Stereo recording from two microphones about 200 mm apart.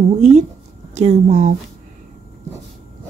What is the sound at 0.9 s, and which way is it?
Speech, 35° right (ahead or behind).